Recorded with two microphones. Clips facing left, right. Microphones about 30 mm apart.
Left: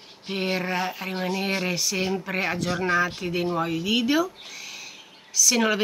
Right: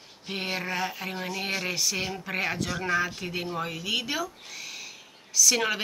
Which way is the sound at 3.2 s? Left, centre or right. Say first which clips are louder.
Left 6 dB; centre.